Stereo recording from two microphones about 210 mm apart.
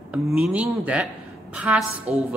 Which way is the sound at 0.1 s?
5° right (ahead or behind).